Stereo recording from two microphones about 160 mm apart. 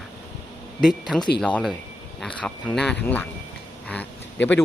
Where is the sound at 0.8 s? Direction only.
Centre (ahead or behind).